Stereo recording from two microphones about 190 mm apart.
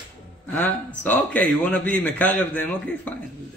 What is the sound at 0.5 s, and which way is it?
A man's voice, 10° left (ahead or behind).